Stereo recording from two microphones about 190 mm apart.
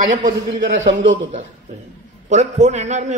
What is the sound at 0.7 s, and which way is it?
Speech, 90° right.